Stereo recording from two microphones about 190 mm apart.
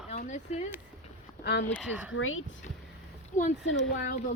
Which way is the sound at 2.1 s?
90° left.